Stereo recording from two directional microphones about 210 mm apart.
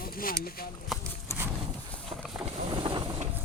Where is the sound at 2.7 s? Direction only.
20° right (ahead or behind).